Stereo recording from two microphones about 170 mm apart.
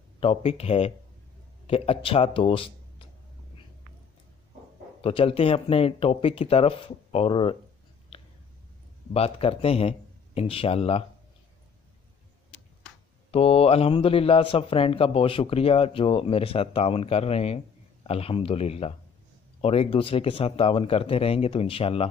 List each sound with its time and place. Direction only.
0.2 s a man's voice: 35° left (ahead or behind)
5.0 s a man's voice: 35° left (ahead or behind)
8.1 s whispering: 30° left (ahead or behind)
9.1 s a man's voice: 35° left (ahead or behind)
13.3 s a man's voice: 35° left (ahead or behind)